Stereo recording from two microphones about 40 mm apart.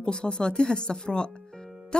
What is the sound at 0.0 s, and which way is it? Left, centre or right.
Speech, left.